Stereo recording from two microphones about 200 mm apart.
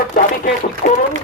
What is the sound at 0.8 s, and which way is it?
Speech, 50° left (ahead or behind).